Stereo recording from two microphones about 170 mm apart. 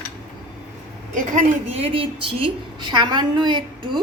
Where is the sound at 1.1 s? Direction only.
50° right (ahead or behind).